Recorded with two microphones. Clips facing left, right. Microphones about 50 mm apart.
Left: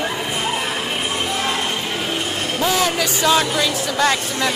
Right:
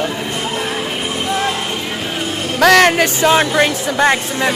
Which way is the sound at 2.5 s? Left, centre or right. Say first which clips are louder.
Right 10 dB; right.